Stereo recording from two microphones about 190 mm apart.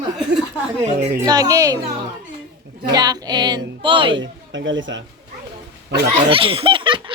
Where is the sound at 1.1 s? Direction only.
20° right (ahead or behind).